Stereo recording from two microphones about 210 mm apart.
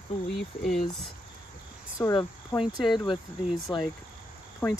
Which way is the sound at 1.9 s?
15° left (ahead or behind).